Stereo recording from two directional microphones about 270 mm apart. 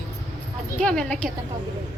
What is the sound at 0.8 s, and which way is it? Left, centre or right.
Speech, centre.